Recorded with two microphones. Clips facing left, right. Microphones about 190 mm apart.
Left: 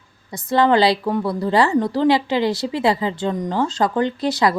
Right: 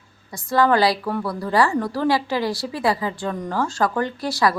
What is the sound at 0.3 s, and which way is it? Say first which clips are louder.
A woman's voice: left 2 dB; 20° left (ahead or behind).